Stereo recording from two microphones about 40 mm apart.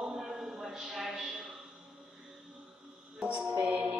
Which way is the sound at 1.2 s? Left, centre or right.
Right.